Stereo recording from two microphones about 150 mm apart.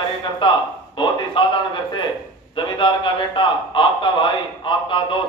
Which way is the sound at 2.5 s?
35° left (ahead or behind).